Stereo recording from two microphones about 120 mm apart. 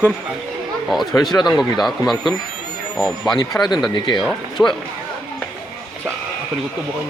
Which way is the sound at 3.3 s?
30° left (ahead or behind).